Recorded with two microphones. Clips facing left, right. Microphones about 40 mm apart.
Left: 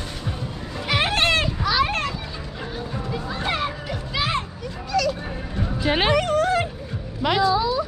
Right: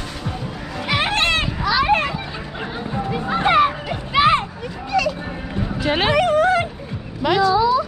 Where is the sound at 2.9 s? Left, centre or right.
Right.